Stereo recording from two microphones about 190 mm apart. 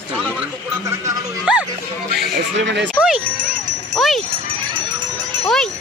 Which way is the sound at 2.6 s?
70° right (ahead or behind).